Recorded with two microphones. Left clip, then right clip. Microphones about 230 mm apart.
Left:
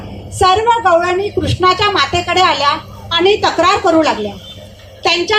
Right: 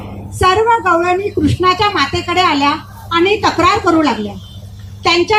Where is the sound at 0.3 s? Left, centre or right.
Left.